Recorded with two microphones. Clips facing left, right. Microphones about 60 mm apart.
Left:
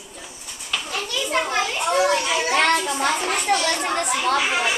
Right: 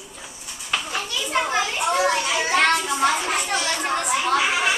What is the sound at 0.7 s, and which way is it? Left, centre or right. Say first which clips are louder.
Children playing: right 1 dB; right.